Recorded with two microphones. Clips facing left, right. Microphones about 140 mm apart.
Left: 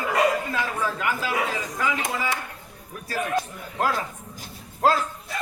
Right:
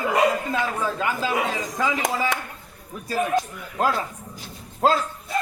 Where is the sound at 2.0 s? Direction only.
90° right.